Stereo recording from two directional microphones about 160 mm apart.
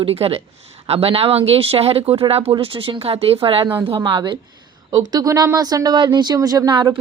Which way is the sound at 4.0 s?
30° right (ahead or behind).